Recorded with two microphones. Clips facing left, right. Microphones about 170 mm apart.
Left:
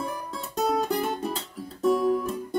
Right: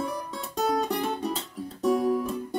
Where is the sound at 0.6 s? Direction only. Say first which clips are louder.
Left 1 dB; 5° left (ahead or behind).